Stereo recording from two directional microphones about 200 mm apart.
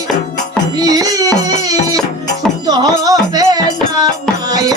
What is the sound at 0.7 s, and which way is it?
Music, 20° right (ahead or behind).